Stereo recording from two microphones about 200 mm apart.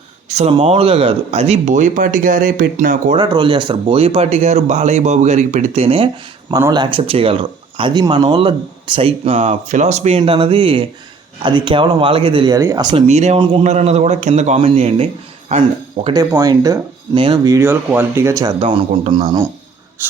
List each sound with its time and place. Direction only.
0.3 s speech: 30° right (ahead or behind)
3.2 s speech: 25° right (ahead or behind)
6.5 s speech: 20° right (ahead or behind)
13.1 s speech: 35° right (ahead or behind)
16.3 s speech: 20° right (ahead or behind)
18.6 s speech: 25° right (ahead or behind)
20.0 s speech: 10° right (ahead or behind)